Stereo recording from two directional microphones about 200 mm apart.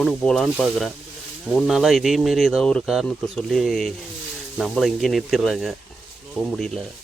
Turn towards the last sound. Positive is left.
turn(degrees=5)  # may be behind; listen again after turning